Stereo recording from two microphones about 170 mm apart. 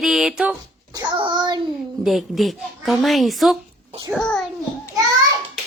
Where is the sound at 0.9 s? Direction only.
25° right (ahead or behind).